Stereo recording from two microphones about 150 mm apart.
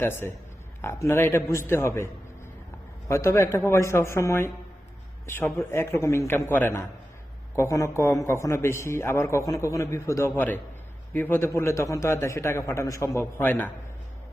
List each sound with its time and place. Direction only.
0.0 s a man's voice: 15° left (ahead or behind)
3.1 s a man's voice: 20° left (ahead or behind)